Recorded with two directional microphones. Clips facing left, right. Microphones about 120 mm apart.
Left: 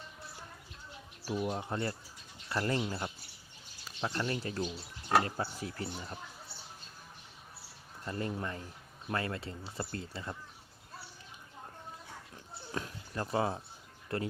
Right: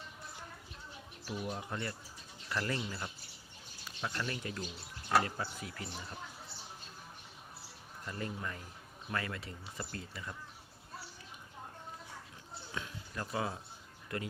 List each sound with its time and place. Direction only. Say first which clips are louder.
1.2 s speech: left 5 dB; 25° left (ahead or behind); by 5.3 s 45° left (ahead or behind)
5.4 s speech: left 4 dB; 35° left (ahead or behind)
8.0 s speech: left 4 dB; 35° left (ahead or behind)
12.7 s a sound: left 4 dB; 35° left (ahead or behind)
14.1 s speech: left 4 dB; 35° left (ahead or behind)